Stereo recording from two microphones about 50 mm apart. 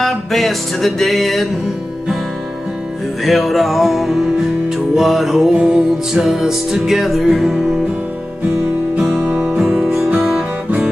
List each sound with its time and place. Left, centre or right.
0.0 s music: centre
3.3 s music: centre
9.2 s music: right
9.6 s music: centre